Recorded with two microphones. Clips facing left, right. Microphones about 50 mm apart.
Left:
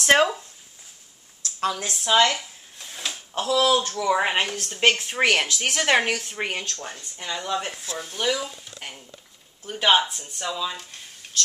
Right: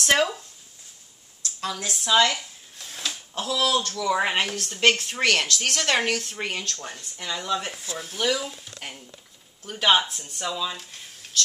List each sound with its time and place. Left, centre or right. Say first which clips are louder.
0.0 s speech: left 3 dB; left
1.7 s speech: left 1 dB; left
2.2 s speech: left 2 dB; centre
7.7 s speech: left 1 dB; centre